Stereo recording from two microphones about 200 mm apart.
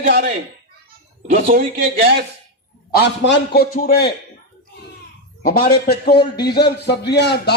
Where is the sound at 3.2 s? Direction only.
55° left (ahead or behind).